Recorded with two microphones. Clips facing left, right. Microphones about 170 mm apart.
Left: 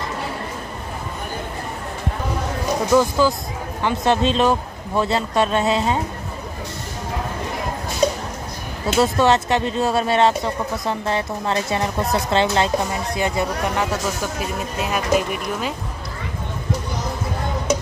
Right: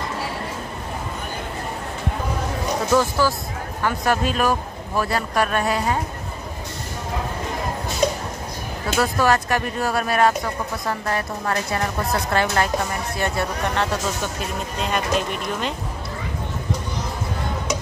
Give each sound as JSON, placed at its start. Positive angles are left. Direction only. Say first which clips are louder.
{"t": 2.9, "sound": "speech", "louder": "left 3 dB", "side_deg": 15}
{"t": 8.8, "sound": "speech", "louder": "left 3 dB", "side_deg": 25}